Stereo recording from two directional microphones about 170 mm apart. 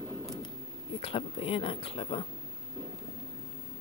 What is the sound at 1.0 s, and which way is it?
Speech, 30° left (ahead or behind).